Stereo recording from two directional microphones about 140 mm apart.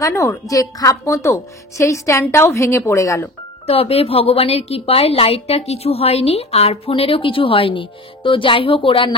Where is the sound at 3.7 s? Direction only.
45° left (ahead or behind).